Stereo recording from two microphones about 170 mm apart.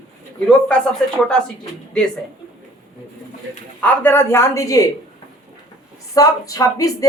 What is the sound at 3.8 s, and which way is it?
Speech, 10° left (ahead or behind).